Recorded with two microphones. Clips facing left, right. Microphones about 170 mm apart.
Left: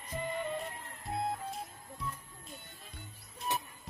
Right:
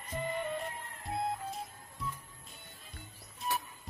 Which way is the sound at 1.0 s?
Centre (ahead or behind).